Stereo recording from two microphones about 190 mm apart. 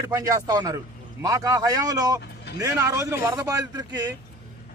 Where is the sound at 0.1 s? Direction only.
20° right (ahead or behind).